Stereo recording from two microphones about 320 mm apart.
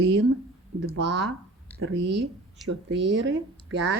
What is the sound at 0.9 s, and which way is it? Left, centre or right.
A woman's voice, right.